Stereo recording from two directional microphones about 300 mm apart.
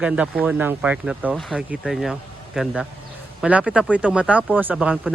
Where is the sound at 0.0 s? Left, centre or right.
Centre.